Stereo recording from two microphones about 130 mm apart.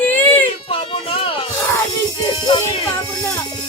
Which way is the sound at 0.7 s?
45° left (ahead or behind).